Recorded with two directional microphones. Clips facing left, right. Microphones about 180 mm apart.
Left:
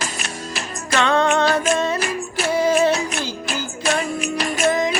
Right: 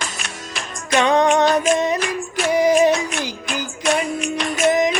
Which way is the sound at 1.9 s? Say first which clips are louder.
Right 1 dB; 5° left (ahead or behind).